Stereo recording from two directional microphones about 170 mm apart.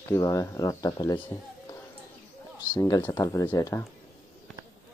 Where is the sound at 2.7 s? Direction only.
15° left (ahead or behind).